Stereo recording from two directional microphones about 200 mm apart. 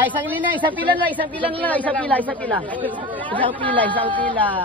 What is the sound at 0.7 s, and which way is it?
Speech, 10° left (ahead or behind).